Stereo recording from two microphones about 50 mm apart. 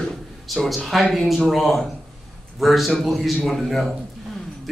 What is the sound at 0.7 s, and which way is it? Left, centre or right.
A man's voice, centre.